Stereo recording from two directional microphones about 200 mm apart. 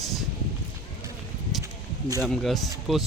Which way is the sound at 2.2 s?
Centre (ahead or behind).